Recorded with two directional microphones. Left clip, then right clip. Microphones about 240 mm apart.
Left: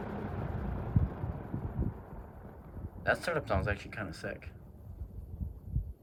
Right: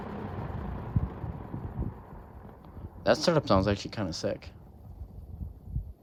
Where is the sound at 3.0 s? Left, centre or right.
Centre.